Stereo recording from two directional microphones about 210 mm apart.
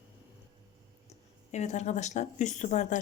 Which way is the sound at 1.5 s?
35° left (ahead or behind).